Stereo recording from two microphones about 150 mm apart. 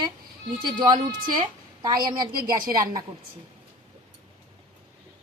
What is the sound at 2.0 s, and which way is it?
Speech, 25° right (ahead or behind).